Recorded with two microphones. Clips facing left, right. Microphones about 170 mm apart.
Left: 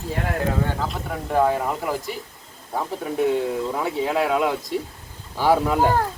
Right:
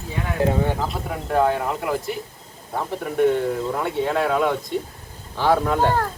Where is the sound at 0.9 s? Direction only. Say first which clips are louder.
Right 1 dB; centre (ahead or behind).